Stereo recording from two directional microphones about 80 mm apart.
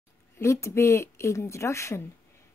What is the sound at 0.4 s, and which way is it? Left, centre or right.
A woman's voice, left.